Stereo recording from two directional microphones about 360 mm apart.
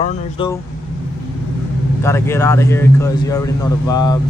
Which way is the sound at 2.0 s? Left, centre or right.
Centre.